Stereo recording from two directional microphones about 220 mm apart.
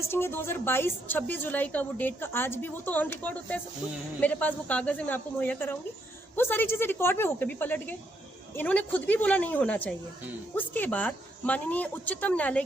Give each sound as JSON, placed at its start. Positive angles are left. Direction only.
{"t": 0.0, "sound": "a woman's voice", "side_deg": 10}